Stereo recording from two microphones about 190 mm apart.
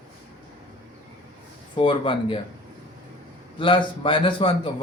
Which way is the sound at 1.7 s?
25° left (ahead or behind).